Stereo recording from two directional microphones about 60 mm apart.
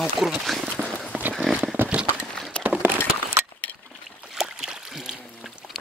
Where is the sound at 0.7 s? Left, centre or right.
Centre.